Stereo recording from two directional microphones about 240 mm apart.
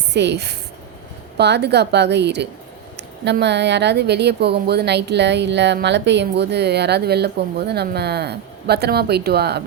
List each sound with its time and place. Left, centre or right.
0.1 s a woman's voice: right